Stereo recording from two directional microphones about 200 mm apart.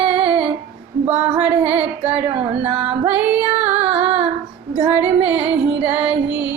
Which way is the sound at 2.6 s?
10° right (ahead or behind).